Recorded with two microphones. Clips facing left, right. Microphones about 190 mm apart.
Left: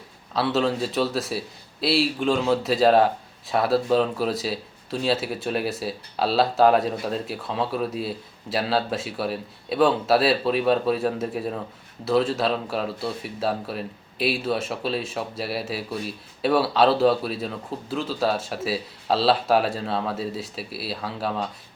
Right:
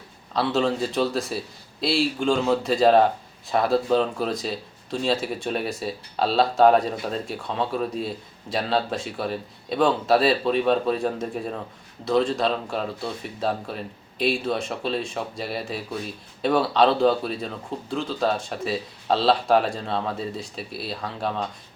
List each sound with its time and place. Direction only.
0.3 s a man's voice: centre (ahead or behind)